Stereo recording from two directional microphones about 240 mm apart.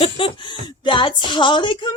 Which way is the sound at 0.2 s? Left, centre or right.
Left.